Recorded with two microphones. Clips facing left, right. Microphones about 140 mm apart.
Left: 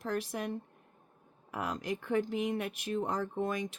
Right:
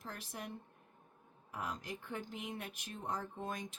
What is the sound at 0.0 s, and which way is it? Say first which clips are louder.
Speech: left 12 dB; 80° left.